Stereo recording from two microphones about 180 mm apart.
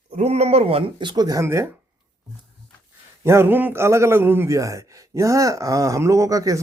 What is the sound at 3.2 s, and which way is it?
A man's voice, 15° right (ahead or behind).